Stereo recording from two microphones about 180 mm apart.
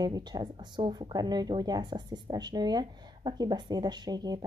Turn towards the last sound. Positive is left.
turn(degrees=-20)  # may be behind; listen again after turning